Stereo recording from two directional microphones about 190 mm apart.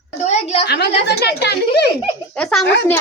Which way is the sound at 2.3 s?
5° left (ahead or behind).